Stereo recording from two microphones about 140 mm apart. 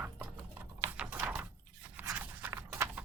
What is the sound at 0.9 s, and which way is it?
Typing, 10° right (ahead or behind).